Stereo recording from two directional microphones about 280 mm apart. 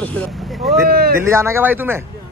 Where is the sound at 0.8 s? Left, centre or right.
Right.